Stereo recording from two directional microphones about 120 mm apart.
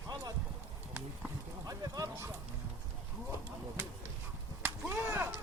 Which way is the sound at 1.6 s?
30° right (ahead or behind).